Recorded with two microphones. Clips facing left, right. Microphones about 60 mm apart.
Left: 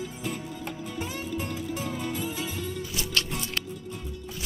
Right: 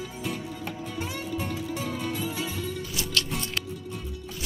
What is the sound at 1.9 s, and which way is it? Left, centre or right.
Music, left.